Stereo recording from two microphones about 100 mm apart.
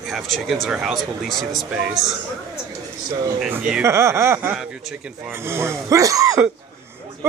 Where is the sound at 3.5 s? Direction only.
10° right (ahead or behind).